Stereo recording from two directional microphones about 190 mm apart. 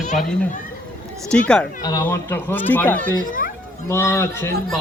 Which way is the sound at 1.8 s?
15° left (ahead or behind).